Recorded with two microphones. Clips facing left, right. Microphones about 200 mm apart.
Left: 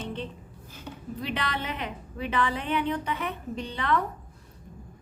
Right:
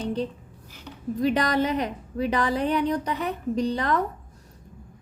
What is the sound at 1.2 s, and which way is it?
A woman's voice, 40° right (ahead or behind).